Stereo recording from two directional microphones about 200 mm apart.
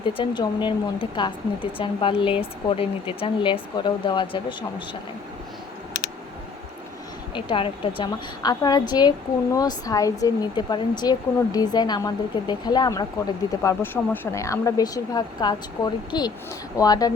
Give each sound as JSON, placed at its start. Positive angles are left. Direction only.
{"t": 0.0, "sound": "a woman's voice", "side_deg": 25}
{"t": 7.3, "sound": "a woman's voice", "side_deg": 25}